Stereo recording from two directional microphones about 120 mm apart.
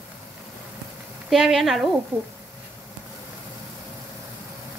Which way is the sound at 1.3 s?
Centre (ahead or behind).